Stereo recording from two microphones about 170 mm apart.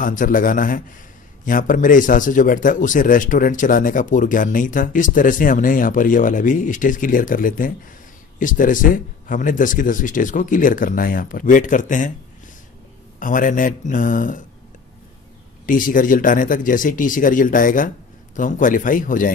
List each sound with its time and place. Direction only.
0.0 s a man's voice: 50° left (ahead or behind)
13.2 s a man's voice: 50° left (ahead or behind)
15.6 s a man's voice: 50° left (ahead or behind)